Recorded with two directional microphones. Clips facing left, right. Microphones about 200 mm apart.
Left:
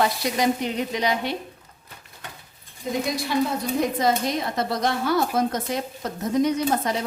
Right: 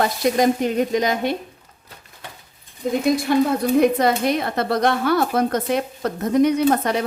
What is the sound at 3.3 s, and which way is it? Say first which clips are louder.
Speech: right 6 dB; 55° right (ahead or behind).